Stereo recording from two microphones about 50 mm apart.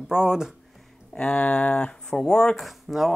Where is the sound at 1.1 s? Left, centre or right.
Centre.